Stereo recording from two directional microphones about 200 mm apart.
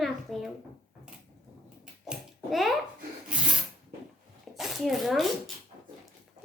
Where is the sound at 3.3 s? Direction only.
5° right (ahead or behind).